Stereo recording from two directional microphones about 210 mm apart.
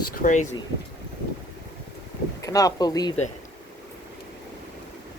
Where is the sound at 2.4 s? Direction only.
15° left (ahead or behind).